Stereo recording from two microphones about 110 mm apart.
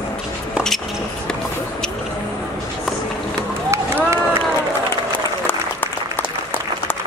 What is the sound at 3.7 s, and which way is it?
Run, 25° right (ahead or behind).